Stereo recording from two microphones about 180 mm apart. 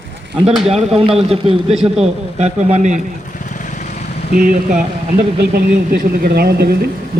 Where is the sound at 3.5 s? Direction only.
45° left (ahead or behind).